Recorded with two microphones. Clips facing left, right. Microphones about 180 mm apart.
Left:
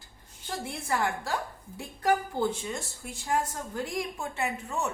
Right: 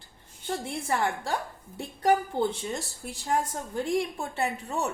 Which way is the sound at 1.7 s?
30° right (ahead or behind).